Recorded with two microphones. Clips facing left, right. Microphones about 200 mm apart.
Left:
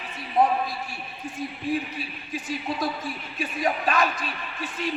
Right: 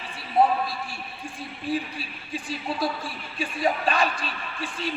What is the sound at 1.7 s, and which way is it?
Speech, 30° right (ahead or behind).